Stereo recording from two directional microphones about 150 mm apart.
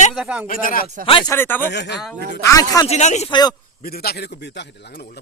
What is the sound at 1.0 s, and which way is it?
Speech, 35° left (ahead or behind).